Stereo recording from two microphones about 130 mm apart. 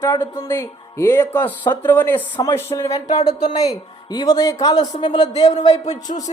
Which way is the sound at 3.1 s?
60° left (ahead or behind).